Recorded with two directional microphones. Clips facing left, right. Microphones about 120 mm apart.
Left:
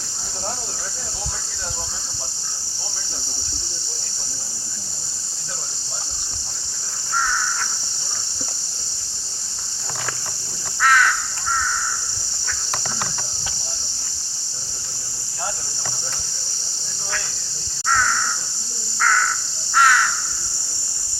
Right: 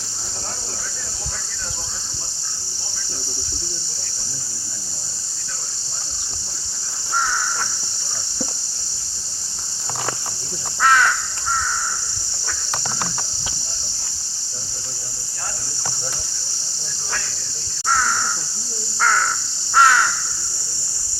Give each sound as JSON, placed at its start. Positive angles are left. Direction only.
{"t": 10.8, "sound": "crow", "side_deg": -25}
{"t": 18.9, "sound": "crow", "side_deg": -30}